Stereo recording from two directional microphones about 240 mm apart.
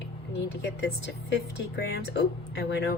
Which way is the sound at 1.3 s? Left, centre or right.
Left.